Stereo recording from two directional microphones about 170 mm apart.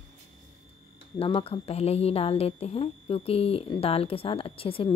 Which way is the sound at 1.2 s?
35° left (ahead or behind).